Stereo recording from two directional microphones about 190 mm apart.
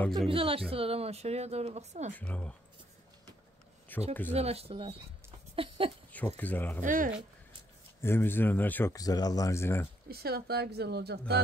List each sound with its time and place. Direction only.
0.3 s a woman's voice: 30° right (ahead or behind)
2.1 s speech: 5° left (ahead or behind)
3.9 s a sound: 10° left (ahead or behind)
4.3 s a woman's voice: 30° right (ahead or behind)
6.1 s speech: 10° left (ahead or behind)
6.8 s speech: 45° right (ahead or behind)
8.0 s speech: 10° left (ahead or behind)
10.0 s speech: 55° right (ahead or behind)